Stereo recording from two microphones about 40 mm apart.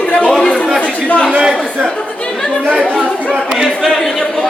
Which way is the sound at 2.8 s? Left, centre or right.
Centre.